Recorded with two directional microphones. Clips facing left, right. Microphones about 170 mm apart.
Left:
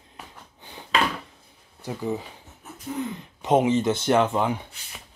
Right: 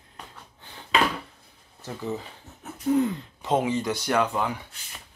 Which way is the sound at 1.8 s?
15° left (ahead or behind).